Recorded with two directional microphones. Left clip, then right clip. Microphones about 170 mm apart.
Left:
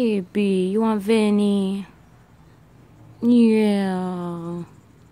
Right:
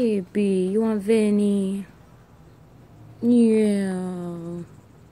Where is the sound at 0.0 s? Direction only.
35° left (ahead or behind).